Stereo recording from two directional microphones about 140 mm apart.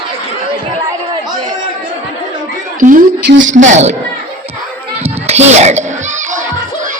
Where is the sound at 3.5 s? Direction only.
60° right (ahead or behind).